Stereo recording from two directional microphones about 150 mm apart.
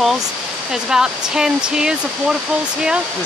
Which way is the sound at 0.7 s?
5° right (ahead or behind).